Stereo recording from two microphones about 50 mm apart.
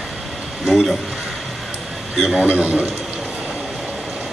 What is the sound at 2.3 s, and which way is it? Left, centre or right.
Speech, right.